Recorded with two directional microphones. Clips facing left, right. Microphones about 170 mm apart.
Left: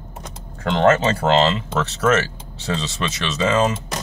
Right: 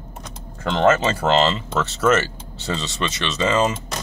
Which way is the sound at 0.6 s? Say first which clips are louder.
Left 1 dB; centre (ahead or behind).